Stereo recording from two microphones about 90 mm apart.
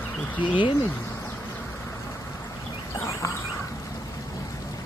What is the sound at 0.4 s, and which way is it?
Speech, 65° left (ahead or behind).